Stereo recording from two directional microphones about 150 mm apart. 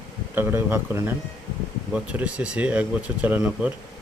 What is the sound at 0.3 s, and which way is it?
Speech, 15° right (ahead or behind).